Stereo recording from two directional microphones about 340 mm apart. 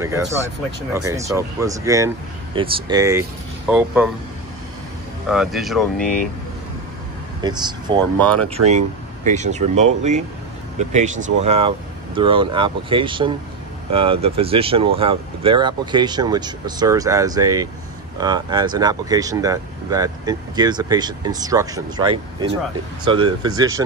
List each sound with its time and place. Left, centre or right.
0.0 s speech: centre
5.3 s speech: centre
7.4 s speech: centre